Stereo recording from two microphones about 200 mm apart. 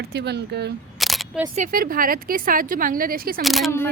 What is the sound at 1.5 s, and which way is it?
Speech, 40° right (ahead or behind).